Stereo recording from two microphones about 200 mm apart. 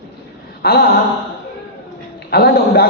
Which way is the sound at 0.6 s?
50° left (ahead or behind).